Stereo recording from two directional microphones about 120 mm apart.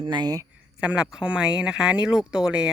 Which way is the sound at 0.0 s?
40° right (ahead or behind).